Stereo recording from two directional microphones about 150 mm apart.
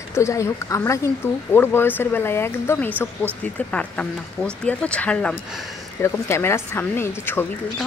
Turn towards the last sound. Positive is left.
turn(degrees=15)  # may be behind; listen again after turning